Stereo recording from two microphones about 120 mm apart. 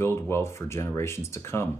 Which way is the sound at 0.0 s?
20° left (ahead or behind).